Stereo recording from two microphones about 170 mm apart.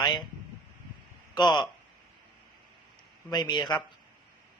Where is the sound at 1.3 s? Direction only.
25° left (ahead or behind).